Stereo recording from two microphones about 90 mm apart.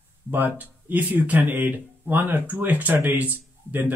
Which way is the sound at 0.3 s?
20° right (ahead or behind).